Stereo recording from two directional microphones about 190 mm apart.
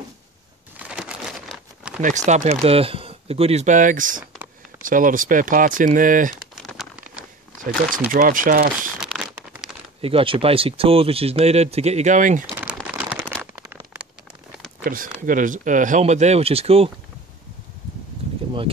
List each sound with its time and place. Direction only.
0.7 s crumpling: 5° right (ahead or behind)
2.0 s speech: 40° right (ahead or behind)
6.5 s crumpling: centre (ahead or behind)
8.1 s speech: 45° right (ahead or behind)
9.0 s a sound: 5° right (ahead or behind)
10.0 s speech: 30° right (ahead or behind)
12.4 s a sound: 5° right (ahead or behind)
13.3 s a sound: centre (ahead or behind)
14.9 s speech: 45° right (ahead or behind)